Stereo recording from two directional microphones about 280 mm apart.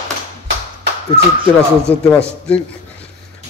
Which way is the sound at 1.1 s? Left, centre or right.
Centre.